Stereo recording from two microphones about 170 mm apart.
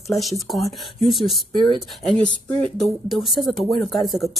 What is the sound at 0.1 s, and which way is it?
Speech, centre (ahead or behind).